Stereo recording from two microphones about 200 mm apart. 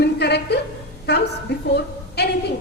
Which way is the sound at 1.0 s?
55° left (ahead or behind).